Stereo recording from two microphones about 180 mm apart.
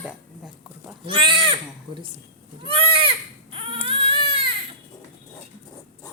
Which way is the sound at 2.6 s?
30° right (ahead or behind).